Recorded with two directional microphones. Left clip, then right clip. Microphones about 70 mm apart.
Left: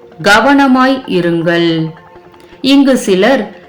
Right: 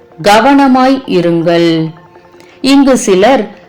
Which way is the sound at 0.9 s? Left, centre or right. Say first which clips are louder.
Right 3 dB; left.